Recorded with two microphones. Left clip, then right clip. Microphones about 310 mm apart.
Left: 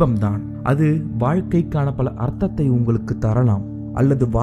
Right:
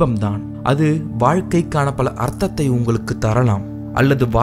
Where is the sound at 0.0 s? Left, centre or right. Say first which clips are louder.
Right 1 dB; centre.